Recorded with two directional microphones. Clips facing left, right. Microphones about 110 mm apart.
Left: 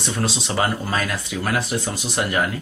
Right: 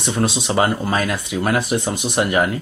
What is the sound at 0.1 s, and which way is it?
Speech, 20° right (ahead or behind).